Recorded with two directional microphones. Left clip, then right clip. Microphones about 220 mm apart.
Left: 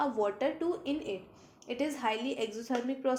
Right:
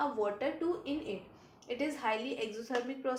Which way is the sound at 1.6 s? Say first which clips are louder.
Left 2 dB; 45° left (ahead or behind).